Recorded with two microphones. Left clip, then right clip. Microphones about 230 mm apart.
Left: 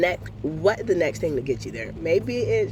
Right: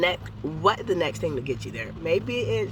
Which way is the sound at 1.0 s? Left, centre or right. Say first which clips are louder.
Left 3 dB; right.